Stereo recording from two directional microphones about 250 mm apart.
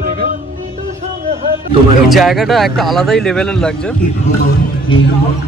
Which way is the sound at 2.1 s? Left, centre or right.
Centre.